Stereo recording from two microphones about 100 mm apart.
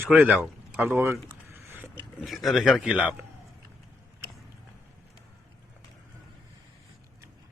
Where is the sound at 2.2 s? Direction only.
Centre (ahead or behind).